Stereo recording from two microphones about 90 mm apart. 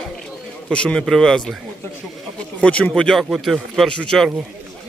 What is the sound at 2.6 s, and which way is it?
A man's voice, 10° left (ahead or behind).